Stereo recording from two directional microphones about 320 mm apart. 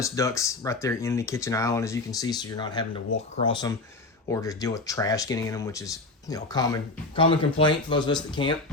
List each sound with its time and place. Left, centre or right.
0.0 s speech: centre